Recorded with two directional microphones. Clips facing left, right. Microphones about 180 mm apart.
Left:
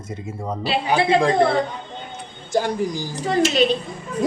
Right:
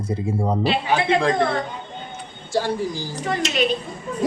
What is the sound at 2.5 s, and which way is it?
Speech, 15° left (ahead or behind).